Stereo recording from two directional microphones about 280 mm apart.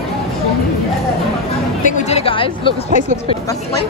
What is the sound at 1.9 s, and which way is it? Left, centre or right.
Music, left.